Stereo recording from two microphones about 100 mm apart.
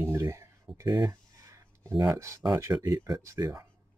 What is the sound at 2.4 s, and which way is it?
Speech, 35° right (ahead or behind).